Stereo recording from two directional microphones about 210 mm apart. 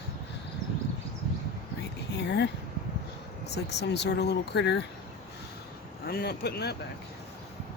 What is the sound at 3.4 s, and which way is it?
Speech, 55° left (ahead or behind).